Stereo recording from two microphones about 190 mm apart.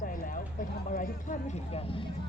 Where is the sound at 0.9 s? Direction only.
40° left (ahead or behind).